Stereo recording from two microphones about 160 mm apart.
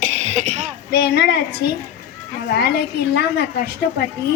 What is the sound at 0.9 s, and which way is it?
Speech, 75° left (ahead or behind).